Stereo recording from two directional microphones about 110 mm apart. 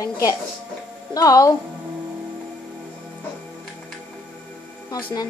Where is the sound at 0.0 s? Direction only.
30° left (ahead or behind).